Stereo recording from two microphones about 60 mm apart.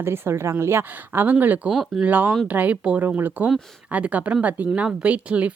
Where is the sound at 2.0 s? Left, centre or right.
Right.